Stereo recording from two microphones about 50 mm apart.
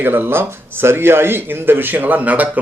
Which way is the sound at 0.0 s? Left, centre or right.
Right.